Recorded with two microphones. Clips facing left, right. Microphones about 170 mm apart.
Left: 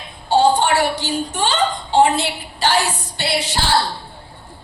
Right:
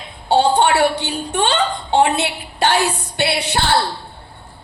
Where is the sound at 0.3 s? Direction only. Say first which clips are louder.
Right 1 dB; 65° right (ahead or behind).